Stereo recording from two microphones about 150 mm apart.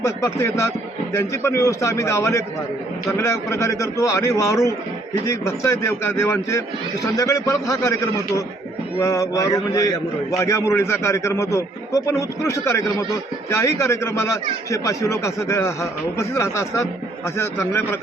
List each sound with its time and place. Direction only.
0.0 s speech: 20° left (ahead or behind)